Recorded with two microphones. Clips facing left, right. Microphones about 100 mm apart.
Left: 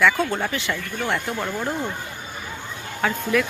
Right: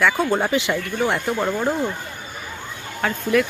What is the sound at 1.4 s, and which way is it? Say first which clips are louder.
Speech: right 5 dB; 20° right (ahead or behind).